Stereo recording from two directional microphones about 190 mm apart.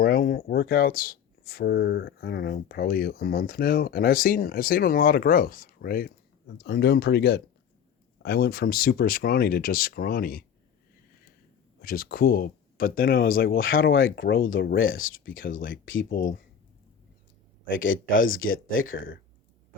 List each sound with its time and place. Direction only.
0.0 s speech: 50° left (ahead or behind)
11.8 s speech: 50° left (ahead or behind)
14.5 s speech: 75° left (ahead or behind); by 16.0 s 90° left
16.0 s speech: 50° left (ahead or behind)
17.7 s speech: 90° left